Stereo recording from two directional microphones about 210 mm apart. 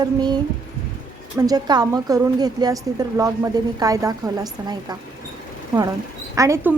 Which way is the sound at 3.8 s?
15° right (ahead or behind).